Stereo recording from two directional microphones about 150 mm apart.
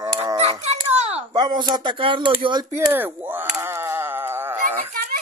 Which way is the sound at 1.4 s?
30° right (ahead or behind).